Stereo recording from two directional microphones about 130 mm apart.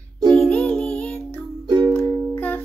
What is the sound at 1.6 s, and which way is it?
Music, 30° right (ahead or behind).